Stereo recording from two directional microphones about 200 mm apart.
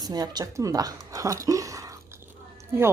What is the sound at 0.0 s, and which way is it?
Speech, 20° right (ahead or behind).